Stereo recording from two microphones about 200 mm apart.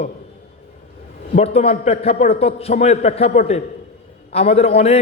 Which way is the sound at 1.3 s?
30° left (ahead or behind).